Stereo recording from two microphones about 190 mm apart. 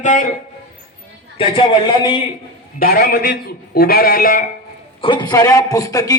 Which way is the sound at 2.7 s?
50° left (ahead or behind).